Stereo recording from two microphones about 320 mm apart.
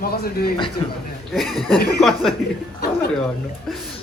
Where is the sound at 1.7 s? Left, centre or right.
Left.